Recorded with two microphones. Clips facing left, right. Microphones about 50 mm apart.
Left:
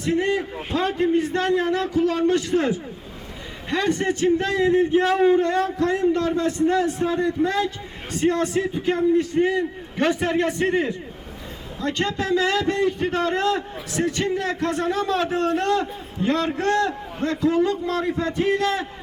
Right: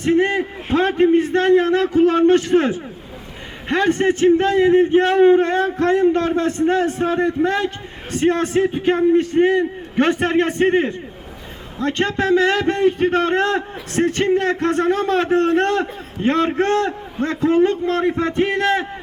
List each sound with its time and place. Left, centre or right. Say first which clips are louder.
0.0 s a man's voice: right 5 dB; right